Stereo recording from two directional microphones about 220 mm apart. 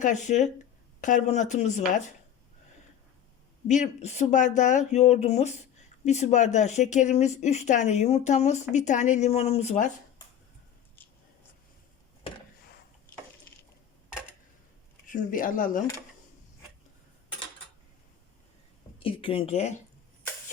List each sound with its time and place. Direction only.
0.0 s speech: 35° left (ahead or behind)
3.7 s speech: 30° left (ahead or behind)
15.1 s speech: 35° left (ahead or behind)
18.9 s speech: 25° left (ahead or behind)